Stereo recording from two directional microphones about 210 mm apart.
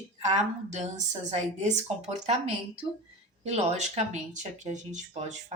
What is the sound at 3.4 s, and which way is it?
Speech, 30° right (ahead or behind).